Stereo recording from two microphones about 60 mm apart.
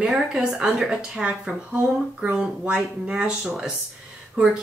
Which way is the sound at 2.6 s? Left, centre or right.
Centre.